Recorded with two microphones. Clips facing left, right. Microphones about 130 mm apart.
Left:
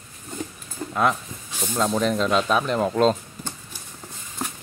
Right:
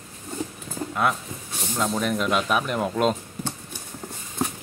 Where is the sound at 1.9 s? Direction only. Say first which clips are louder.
Left 4 dB; 10° right (ahead or behind).